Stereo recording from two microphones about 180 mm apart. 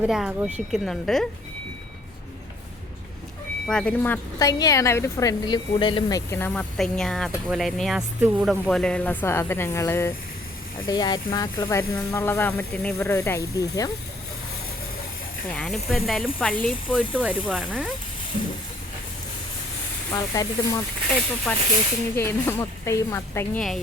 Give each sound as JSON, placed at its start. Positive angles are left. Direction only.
{"t": 0.0, "sound": "speech", "side_deg": -5}
{"t": 3.7, "sound": "a woman's voice", "side_deg": 5}
{"t": 15.5, "sound": "speech", "side_deg": 5}
{"t": 20.1, "sound": "speech", "side_deg": 20}
{"t": 21.5, "sound": "a woman's voice", "side_deg": 5}